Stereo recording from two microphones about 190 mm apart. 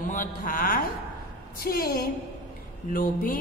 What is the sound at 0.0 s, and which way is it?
A woman's voice, 45° left (ahead or behind).